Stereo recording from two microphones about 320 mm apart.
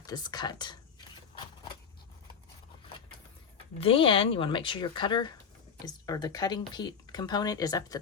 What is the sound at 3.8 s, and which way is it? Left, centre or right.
Speech, centre.